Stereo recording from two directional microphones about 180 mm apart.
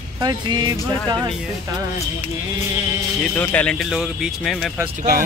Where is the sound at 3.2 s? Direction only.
10° left (ahead or behind).